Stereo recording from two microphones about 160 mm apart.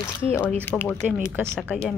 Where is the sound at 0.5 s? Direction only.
10° left (ahead or behind).